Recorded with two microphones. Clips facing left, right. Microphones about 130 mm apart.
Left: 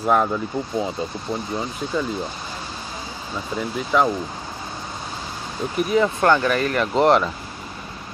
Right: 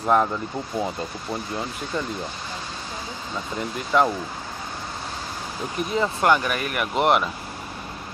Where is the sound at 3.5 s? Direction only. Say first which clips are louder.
Left 1 dB; centre (ahead or behind).